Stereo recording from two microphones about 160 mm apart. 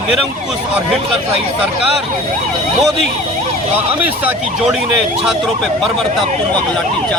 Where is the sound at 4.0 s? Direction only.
10° right (ahead or behind).